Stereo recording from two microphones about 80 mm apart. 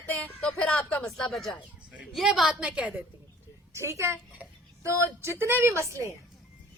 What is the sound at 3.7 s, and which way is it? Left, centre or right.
Speech, right.